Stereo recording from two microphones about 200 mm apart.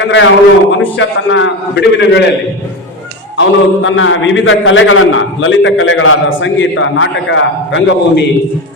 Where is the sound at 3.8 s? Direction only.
75° left (ahead or behind).